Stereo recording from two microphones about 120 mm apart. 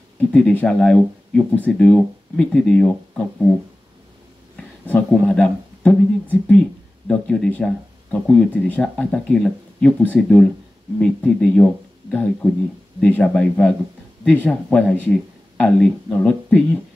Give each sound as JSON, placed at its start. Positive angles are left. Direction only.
{"t": 0.3, "sound": "speech", "side_deg": 10}
{"t": 4.8, "sound": "speech", "side_deg": 10}